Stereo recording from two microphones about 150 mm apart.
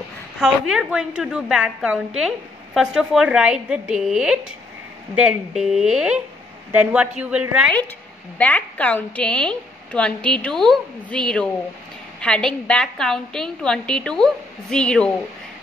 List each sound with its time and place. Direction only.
0.4 s a woman's voice: 5° right (ahead or behind)
8.4 s a woman's voice: 10° left (ahead or behind)